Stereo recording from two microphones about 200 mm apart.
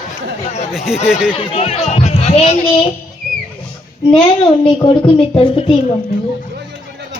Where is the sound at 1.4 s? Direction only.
30° left (ahead or behind).